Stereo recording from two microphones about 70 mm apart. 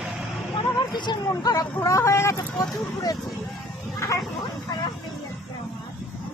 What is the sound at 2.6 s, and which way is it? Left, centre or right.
Speech, left.